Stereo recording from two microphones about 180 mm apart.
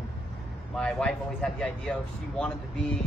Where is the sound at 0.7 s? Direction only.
5° left (ahead or behind).